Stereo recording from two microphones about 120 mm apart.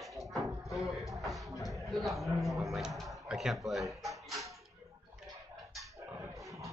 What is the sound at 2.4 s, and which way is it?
Speech, centre (ahead or behind).